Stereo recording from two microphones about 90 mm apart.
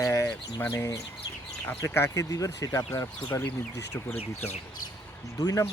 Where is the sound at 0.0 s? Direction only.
35° left (ahead or behind).